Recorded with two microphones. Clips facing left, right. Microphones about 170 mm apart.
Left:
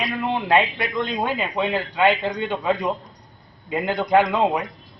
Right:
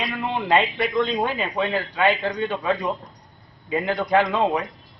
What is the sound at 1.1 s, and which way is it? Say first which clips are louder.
A man's voice: even; 10° left (ahead or behind).